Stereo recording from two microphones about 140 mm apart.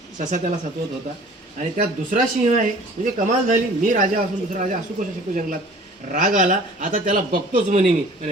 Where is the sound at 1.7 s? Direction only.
70° right (ahead or behind).